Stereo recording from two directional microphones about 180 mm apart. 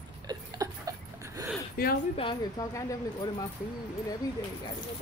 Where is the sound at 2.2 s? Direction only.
25° left (ahead or behind).